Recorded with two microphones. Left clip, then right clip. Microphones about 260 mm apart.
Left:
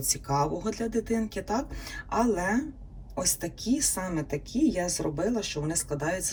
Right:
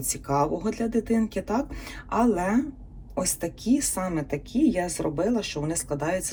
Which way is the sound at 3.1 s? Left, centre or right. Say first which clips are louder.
Right 2 dB; centre.